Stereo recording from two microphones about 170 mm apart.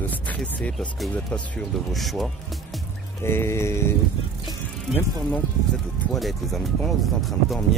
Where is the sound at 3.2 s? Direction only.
15° left (ahead or behind).